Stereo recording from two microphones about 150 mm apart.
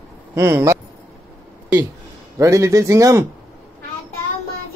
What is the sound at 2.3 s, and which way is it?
Speech, 20° right (ahead or behind).